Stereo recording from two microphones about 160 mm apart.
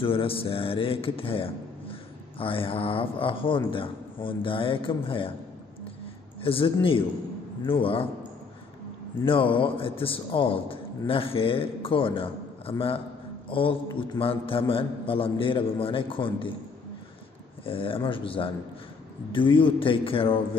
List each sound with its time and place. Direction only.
0.0 s speech: 35° left (ahead or behind)
6.4 s speech: 35° left (ahead or behind)
9.2 s speech: 35° left (ahead or behind)
17.6 s speech: 35° left (ahead or behind)